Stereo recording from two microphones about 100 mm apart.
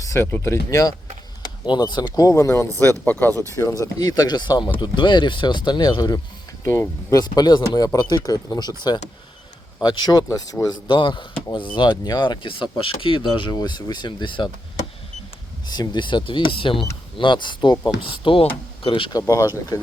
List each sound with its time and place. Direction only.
0.0 s speech: 30° left (ahead or behind)
1.4 s speech: 50° left (ahead or behind); by 2.6 s 30° left (ahead or behind)
3.1 s speech: 20° left (ahead or behind)
3.5 s speech: 30° left (ahead or behind)
6.7 s speech: 25° left (ahead or behind)
7.2 s speech: 45° left (ahead or behind)
10.8 s speech: 55° left (ahead or behind)
15.6 s speech: 45° left (ahead or behind)
19.3 s speech: 35° left (ahead or behind)